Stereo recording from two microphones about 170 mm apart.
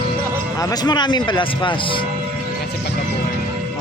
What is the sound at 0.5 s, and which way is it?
Speech, 20° left (ahead or behind).